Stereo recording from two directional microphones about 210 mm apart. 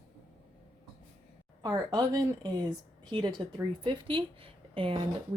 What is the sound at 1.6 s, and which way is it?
A woman's voice, 15° right (ahead or behind).